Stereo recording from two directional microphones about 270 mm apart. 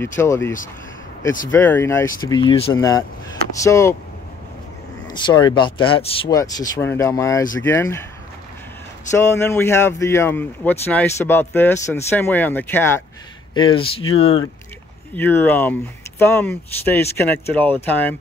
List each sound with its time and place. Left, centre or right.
0.2 s speech: centre
5.0 s speech: centre
9.1 s speech: centre
13.6 s speech: centre
15.1 s speech: centre